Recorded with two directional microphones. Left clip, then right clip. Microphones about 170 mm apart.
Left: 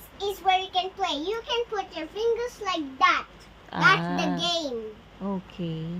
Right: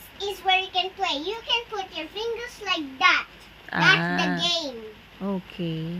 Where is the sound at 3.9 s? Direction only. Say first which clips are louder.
Right 3 dB; 10° right (ahead or behind).